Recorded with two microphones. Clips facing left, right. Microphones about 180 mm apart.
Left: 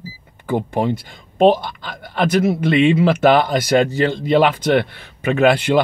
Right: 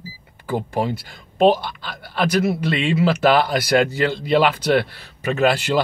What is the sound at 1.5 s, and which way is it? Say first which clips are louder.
Speech: left 2 dB; 50° left (ahead or behind).